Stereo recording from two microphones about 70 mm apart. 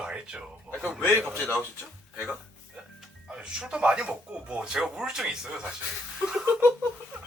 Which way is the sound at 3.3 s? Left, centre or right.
Centre.